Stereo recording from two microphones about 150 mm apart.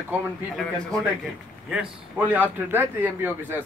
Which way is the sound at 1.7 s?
10° right (ahead or behind).